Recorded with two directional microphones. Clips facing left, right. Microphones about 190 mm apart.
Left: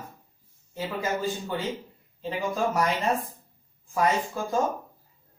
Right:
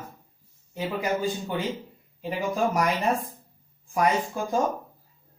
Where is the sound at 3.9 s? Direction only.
15° right (ahead or behind).